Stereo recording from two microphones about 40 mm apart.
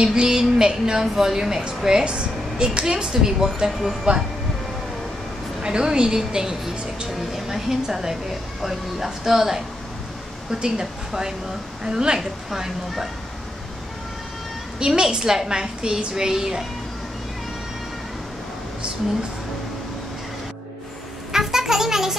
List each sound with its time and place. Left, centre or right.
0.0 s speech: centre
5.6 s a woman's voice: centre
14.8 s speech: centre
21.3 s a sound: centre